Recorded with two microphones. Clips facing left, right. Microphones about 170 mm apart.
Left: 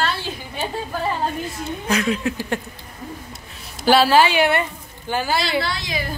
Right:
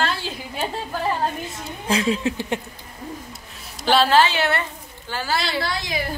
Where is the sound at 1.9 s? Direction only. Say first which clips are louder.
Right 1 dB; 30° right (ahead or behind).